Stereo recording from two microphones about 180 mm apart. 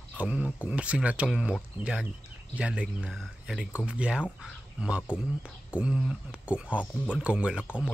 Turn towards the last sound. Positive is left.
turn(degrees=-5)  # may be behind; listen again after turning